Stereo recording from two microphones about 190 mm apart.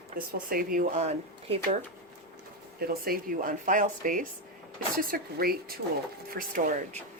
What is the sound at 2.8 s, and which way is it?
Speech, 50° right (ahead or behind).